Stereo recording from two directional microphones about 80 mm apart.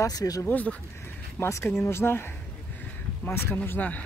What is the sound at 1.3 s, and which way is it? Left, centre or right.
Speech, left.